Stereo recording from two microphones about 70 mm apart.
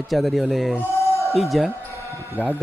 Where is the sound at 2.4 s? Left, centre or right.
Right.